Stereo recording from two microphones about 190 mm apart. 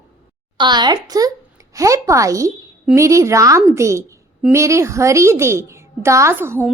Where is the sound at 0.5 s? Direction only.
25° right (ahead or behind).